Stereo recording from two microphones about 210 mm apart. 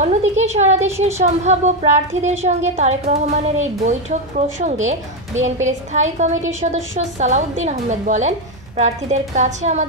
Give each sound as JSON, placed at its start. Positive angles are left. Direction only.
{"t": 0.0, "sound": "a woman's voice", "side_deg": -30}